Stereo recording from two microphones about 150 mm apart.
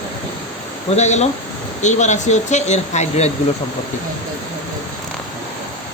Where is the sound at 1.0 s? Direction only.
50° left (ahead or behind).